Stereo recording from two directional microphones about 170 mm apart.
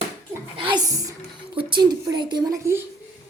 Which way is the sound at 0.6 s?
25° right (ahead or behind).